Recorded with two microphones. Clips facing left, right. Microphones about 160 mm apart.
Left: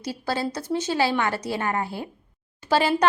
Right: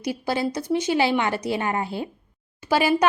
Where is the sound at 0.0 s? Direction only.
15° right (ahead or behind).